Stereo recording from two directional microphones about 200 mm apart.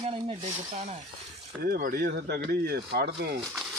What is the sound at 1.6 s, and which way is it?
Speech, 45° right (ahead or behind).